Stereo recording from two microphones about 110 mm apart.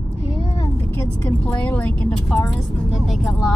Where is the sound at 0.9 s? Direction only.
20° left (ahead or behind).